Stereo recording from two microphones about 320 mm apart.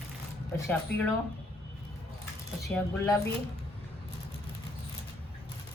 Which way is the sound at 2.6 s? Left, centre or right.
Centre.